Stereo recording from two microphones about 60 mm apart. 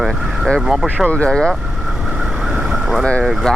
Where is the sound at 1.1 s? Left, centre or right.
Centre.